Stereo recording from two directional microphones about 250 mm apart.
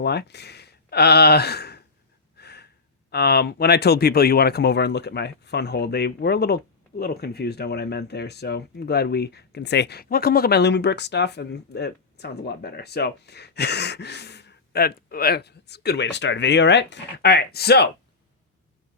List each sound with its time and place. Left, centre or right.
0.0 s speech: left
2.4 s gasp: left
3.1 s speech: left